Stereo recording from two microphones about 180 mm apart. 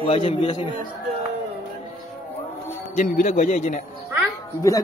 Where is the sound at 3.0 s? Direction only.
45° left (ahead or behind).